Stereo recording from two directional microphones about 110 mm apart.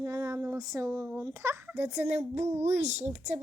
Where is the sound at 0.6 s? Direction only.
35° right (ahead or behind).